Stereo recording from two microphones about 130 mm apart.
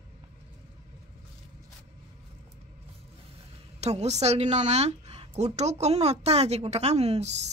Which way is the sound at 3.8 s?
55° right (ahead or behind).